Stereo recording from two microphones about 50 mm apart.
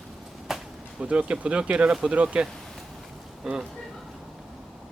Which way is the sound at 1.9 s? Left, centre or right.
Centre.